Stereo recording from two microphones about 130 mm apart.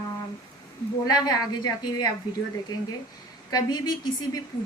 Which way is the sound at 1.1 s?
30° left (ahead or behind).